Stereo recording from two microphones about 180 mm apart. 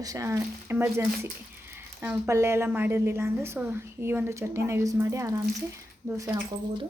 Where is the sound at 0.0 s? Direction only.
20° right (ahead or behind).